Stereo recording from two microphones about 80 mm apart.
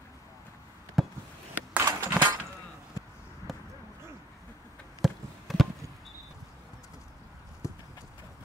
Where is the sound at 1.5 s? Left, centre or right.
Right.